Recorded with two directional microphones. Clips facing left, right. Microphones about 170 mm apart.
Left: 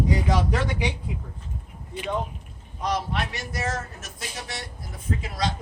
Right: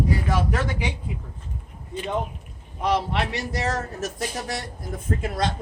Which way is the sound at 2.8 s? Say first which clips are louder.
Right 4 dB; 65° right (ahead or behind).